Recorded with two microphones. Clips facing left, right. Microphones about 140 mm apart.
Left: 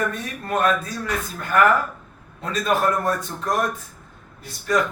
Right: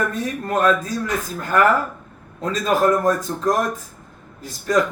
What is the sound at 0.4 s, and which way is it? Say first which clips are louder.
Speech: right 2 dB; 40° right (ahead or behind).